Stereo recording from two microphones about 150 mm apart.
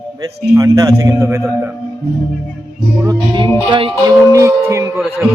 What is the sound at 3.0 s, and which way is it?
Music, 30° right (ahead or behind).